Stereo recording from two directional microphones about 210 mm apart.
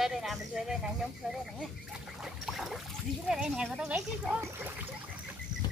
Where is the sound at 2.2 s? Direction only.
Centre (ahead or behind).